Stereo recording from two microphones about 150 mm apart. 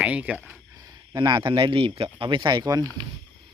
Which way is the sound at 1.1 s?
30° right (ahead or behind).